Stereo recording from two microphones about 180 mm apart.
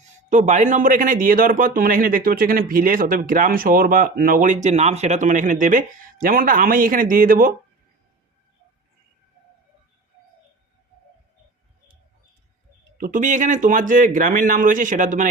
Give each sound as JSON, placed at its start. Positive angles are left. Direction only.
{"t": 0.0, "sound": "speech", "side_deg": -40}
{"t": 13.0, "sound": "speech", "side_deg": -45}